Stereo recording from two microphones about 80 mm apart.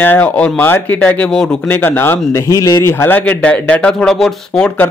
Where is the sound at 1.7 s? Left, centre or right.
Left; by 4.8 s centre.